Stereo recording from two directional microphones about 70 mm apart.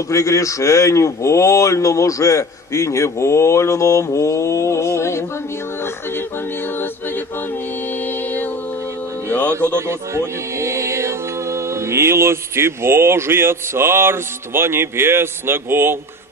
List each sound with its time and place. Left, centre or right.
0.1 s speech: left
5.8 s a capella: left
9.8 s music: right